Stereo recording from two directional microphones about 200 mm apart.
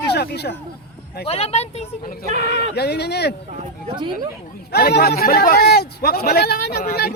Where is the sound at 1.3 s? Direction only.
30° left (ahead or behind).